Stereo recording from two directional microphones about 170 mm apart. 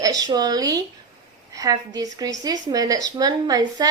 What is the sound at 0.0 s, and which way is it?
A woman's voice, 20° right (ahead or behind).